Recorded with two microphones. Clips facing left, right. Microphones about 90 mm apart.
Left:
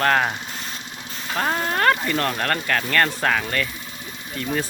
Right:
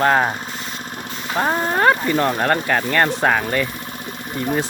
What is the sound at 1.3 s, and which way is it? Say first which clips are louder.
Speech: right 4 dB; 15° right (ahead or behind).